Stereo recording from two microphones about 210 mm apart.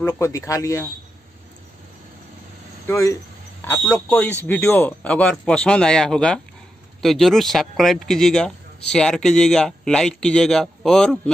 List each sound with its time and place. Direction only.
0.0 s speech: 15° left (ahead or behind)
2.9 s a man's voice: 15° left (ahead or behind)